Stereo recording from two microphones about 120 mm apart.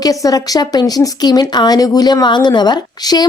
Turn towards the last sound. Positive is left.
turn(degrees=35)  # may be behind; listen again after turning